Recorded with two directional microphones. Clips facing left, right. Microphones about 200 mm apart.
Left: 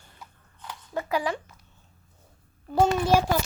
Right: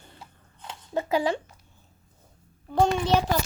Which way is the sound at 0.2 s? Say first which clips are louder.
Left 2 dB; 25° right (ahead or behind).